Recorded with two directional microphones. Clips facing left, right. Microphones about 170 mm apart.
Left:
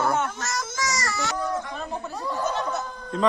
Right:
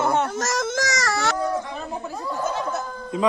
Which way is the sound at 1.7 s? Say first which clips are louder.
Right 1 dB; 5° right (ahead or behind).